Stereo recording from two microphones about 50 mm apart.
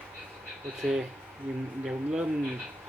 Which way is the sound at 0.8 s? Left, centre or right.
Centre.